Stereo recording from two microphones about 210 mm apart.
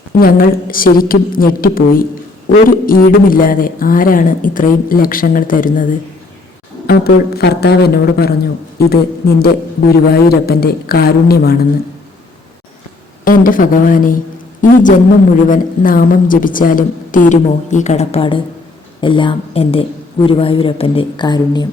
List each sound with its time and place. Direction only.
0.2 s a woman's voice: 45° left (ahead or behind)
6.8 s a woman's voice: 50° left (ahead or behind)
13.2 s a man's voice: 40° left (ahead or behind); by 21.7 s 20° left (ahead or behind)